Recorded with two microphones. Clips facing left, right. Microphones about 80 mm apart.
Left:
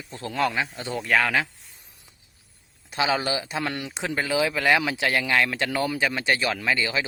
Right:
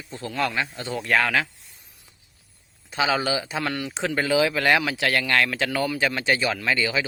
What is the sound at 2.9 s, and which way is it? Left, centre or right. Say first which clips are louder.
Speech: right 1 dB; centre.